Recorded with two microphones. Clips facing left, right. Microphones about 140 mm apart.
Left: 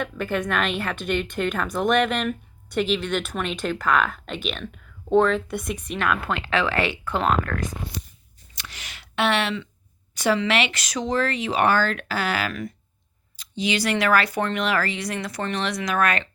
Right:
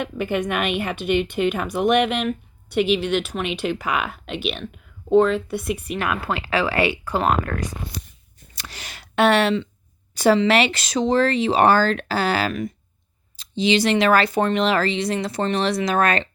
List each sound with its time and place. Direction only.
0.0 s speech: 15° right (ahead or behind)
3.4 s speech: 10° right (ahead or behind)
8.5 s a sound: 35° right (ahead or behind)
10.2 s speech: 30° right (ahead or behind)